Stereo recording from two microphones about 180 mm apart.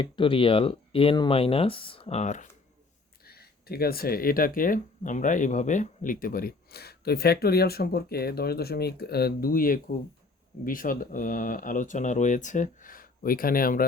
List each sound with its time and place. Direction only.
0.0 s speech: 30° left (ahead or behind)
3.2 s speech: 60° left (ahead or behind)